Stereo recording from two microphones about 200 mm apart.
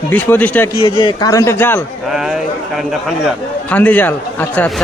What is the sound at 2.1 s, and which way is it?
A man's voice, centre (ahead or behind).